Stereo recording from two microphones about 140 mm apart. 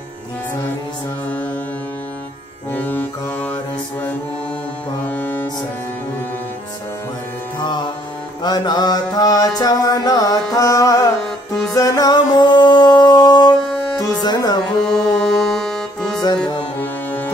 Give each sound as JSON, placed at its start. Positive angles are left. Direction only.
{"t": 2.7, "sound": "music", "side_deg": 10}
{"t": 5.0, "sound": "music", "side_deg": 10}
{"t": 8.4, "sound": "music", "side_deg": 30}
{"t": 14.9, "sound": "music", "side_deg": 5}
{"t": 16.8, "sound": "music", "side_deg": 15}